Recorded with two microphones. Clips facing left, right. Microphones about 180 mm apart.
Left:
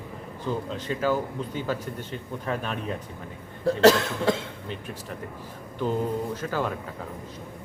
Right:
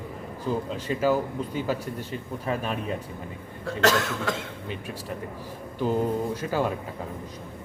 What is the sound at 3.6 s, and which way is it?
Speech, 35° left (ahead or behind).